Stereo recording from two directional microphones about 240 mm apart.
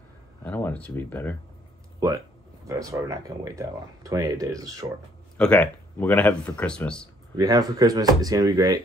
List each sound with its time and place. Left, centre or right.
0.4 s speech: centre
2.6 s speech: centre
5.4 s speech: centre
7.3 s speech: centre